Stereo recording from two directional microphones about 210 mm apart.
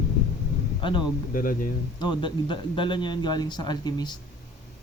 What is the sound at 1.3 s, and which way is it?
Speech, 40° left (ahead or behind).